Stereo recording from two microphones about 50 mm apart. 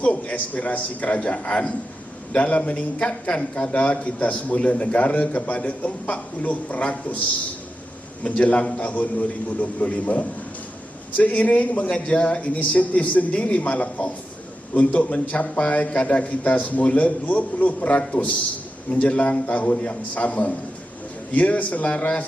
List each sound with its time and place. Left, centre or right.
0.0 s speech: left
8.2 s speech: left